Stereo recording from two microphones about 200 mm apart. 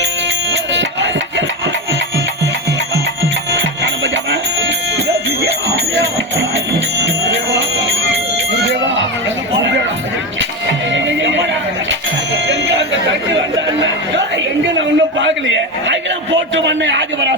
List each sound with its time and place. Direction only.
0.5 s music: 65° right (ahead or behind)
3.5 s music: 65° right (ahead or behind)
10.9 s neigh: 65° right (ahead or behind)
12.5 s music: 65° right (ahead or behind)
14.3 s a sound: 65° right (ahead or behind)